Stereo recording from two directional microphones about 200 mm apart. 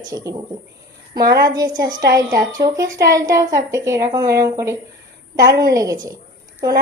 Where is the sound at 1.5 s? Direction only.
20° right (ahead or behind).